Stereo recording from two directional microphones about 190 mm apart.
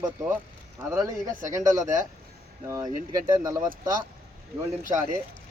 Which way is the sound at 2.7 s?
15° right (ahead or behind).